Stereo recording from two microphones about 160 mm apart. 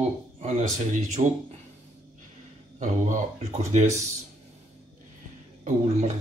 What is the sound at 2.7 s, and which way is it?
Speech, 50° right (ahead or behind).